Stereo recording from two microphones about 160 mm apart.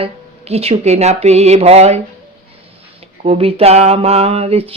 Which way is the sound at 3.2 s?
40° right (ahead or behind).